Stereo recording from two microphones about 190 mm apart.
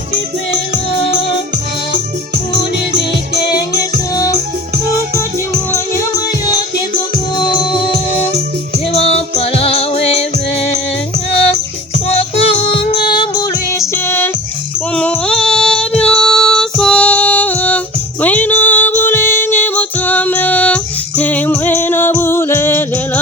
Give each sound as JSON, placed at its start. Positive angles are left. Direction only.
{"t": 8.9, "sound": "music", "side_deg": 30}
{"t": 12.4, "sound": "music", "side_deg": 30}
{"t": 14.9, "sound": "female singing", "side_deg": 5}
{"t": 18.2, "sound": "music", "side_deg": 10}